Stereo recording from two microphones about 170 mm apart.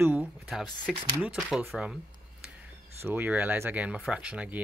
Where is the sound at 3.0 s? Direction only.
10° right (ahead or behind).